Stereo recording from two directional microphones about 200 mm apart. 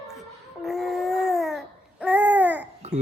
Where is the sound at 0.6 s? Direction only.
Centre (ahead or behind).